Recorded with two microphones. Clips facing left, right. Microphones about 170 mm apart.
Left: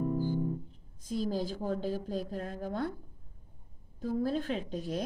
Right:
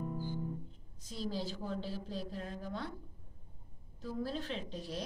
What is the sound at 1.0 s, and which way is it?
A woman's voice, 50° left (ahead or behind).